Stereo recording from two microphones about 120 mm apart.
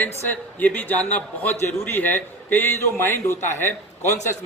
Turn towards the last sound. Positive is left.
turn(degrees=20)  # may be behind; listen again after turning